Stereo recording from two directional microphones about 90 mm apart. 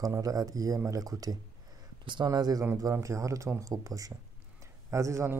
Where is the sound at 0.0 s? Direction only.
40° right (ahead or behind).